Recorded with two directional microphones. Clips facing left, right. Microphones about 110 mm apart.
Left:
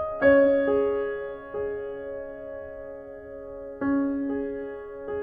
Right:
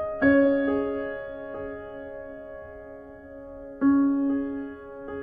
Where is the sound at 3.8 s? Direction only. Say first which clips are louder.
Right 5 dB; 20° right (ahead or behind).